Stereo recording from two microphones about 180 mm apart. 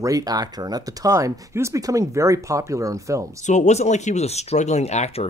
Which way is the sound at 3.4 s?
40° left (ahead or behind).